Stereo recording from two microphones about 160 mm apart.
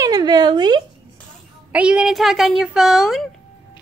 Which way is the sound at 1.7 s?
5° right (ahead or behind).